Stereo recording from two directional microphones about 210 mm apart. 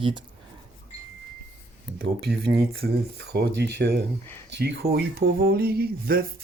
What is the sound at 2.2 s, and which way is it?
Speech, 50° right (ahead or behind).